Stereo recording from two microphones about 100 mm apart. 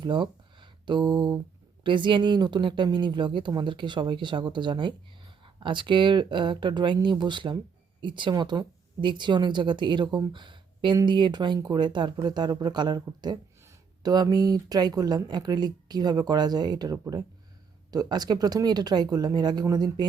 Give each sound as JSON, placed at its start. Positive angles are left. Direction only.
{"t": 0.0, "sound": "speech", "side_deg": -55}